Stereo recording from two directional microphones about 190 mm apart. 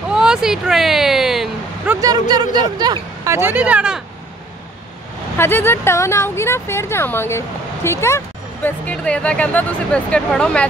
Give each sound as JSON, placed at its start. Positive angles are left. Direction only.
{"t": 0.1, "sound": "a sound", "side_deg": -5}
{"t": 2.0, "sound": "speech", "side_deg": -20}
{"t": 5.4, "sound": "speech", "side_deg": 10}